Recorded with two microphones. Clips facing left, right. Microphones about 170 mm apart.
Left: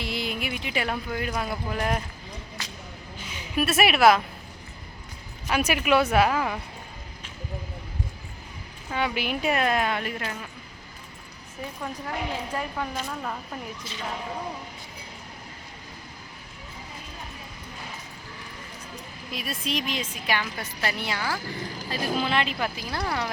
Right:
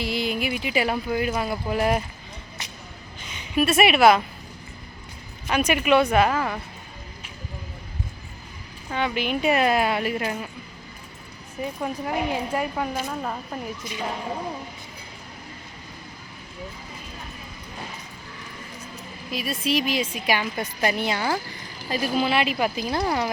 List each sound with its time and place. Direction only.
0.0 s speech: centre (ahead or behind)
2.6 s a sound: 20° right (ahead or behind)
3.2 s a woman's voice: 5° left (ahead or behind)
5.5 s speech: 5° left (ahead or behind)
8.9 s speech: 10° left (ahead or behind); by 10.3 s 10° right (ahead or behind)
11.8 s a woman's voice: 15° right (ahead or behind)
19.3 s a woman's voice: centre (ahead or behind); by 23.3 s 15° right (ahead or behind)